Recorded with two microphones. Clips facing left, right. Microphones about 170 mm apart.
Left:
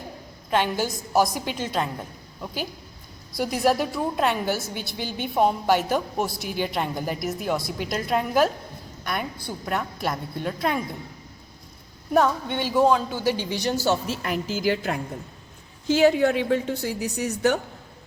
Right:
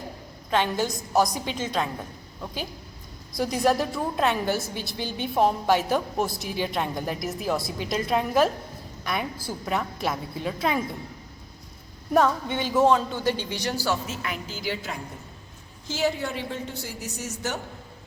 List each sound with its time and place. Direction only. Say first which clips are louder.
0.5 s a woman's voice: left 1 dB; 10° left (ahead or behind)
3.3 s a woman's voice: left 1 dB; centre (ahead or behind)
12.1 s speech: left 1 dB; centre (ahead or behind); by 14.2 s 25° left (ahead or behind)
14.6 s a woman's voice: left 7 dB; 50° left (ahead or behind)
15.9 s a woman's voice: left 9 dB; 60° left (ahead or behind)